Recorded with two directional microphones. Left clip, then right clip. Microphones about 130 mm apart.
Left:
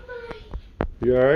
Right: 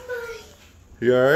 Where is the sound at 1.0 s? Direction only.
25° right (ahead or behind).